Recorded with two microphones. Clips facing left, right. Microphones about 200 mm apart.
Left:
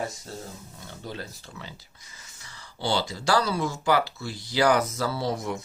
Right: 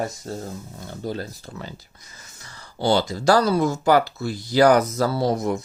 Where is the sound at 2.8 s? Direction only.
45° right (ahead or behind).